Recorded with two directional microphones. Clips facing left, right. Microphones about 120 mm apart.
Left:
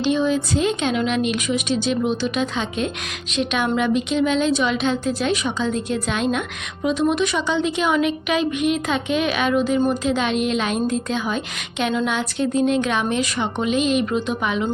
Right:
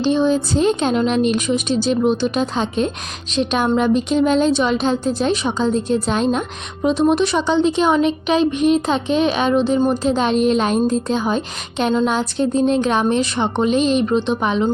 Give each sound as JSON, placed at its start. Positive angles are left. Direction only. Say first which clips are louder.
{"t": 0.0, "sound": "a woman's voice", "louder": "right 3 dB", "side_deg": -35}